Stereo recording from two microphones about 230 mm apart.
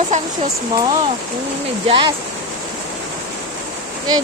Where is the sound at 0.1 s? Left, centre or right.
Right.